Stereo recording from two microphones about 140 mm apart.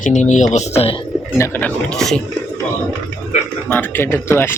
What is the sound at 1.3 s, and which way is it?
Speech, 15° left (ahead or behind).